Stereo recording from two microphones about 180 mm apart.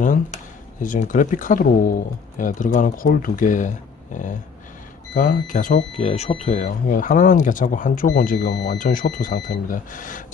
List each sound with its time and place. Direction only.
0.0 s a sound: 45° left (ahead or behind)
0.8 s speech: 45° left (ahead or behind)
5.9 s speech: 35° left (ahead or behind)
8.5 s speech: 70° left (ahead or behind)
8.7 s speech: 50° left (ahead or behind)